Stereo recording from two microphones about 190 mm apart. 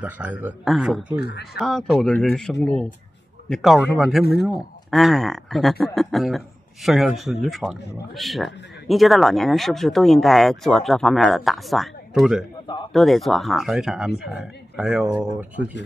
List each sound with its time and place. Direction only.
0.0 s a man's voice: 10° right (ahead or behind)
1.2 s speech: 55° left (ahead or behind)
1.6 s speech: centre (ahead or behind)
4.2 s speech: 55° left (ahead or behind)
4.9 s speech: centre (ahead or behind)